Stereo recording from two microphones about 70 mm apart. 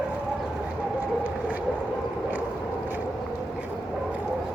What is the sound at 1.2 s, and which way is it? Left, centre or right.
Vehicle, right.